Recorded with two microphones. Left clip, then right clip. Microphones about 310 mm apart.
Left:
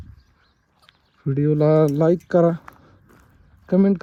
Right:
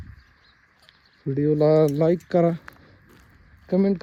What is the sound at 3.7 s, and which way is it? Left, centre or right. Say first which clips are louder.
Speech: left 3 dB; left.